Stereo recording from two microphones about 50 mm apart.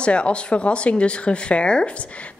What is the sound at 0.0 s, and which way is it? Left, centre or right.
Speech, left.